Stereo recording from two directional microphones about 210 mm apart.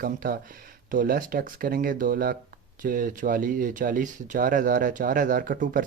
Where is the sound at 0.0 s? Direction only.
45° right (ahead or behind).